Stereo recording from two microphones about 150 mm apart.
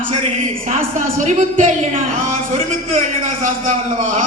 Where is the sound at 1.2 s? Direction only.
55° right (ahead or behind).